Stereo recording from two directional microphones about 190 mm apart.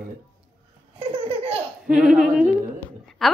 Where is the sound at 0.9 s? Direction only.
30° right (ahead or behind).